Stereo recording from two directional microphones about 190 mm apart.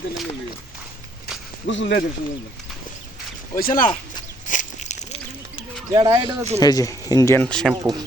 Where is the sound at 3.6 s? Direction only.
50° left (ahead or behind).